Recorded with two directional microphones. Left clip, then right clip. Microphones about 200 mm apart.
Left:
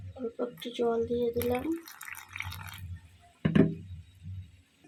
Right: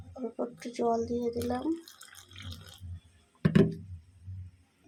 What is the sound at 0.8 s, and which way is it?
Speech, centre (ahead or behind).